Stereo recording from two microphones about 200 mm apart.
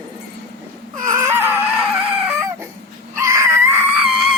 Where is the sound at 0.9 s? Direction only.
15° right (ahead or behind).